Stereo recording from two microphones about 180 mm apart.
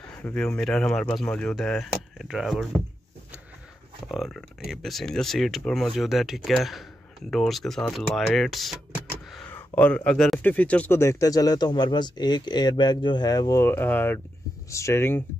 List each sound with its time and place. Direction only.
0.1 s speech: 5° left (ahead or behind)
4.1 s speech: centre (ahead or behind)